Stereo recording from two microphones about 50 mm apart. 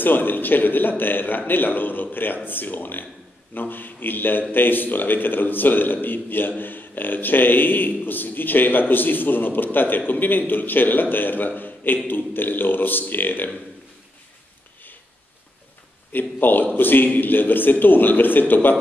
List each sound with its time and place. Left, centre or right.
0.0 s a man's voice: left
16.1 s a man's voice: left